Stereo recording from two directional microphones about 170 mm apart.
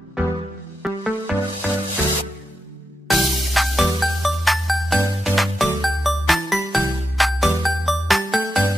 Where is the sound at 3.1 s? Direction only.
Centre (ahead or behind).